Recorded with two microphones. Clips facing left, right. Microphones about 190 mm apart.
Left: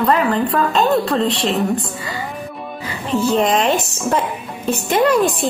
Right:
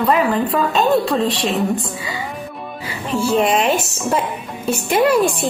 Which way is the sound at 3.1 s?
10° right (ahead or behind).